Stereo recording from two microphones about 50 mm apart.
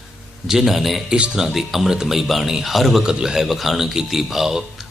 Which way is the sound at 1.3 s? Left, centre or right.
Centre.